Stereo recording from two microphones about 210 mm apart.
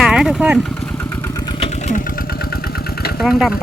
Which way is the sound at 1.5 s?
30° left (ahead or behind).